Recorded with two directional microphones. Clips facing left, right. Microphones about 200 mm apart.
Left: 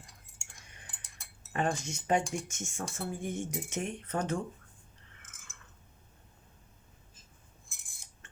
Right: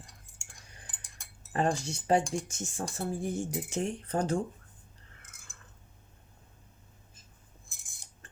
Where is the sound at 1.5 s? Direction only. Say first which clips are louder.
Right 3 dB; 35° right (ahead or behind).